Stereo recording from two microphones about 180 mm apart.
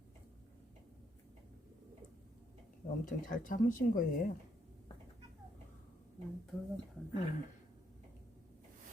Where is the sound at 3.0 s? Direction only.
45° left (ahead or behind).